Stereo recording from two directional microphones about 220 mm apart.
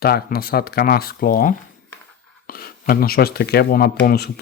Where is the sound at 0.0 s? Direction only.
45° left (ahead or behind).